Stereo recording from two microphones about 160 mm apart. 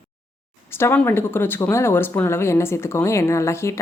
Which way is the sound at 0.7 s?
15° left (ahead or behind).